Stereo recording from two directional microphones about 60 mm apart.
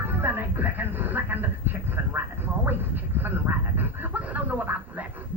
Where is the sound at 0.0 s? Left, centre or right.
Right.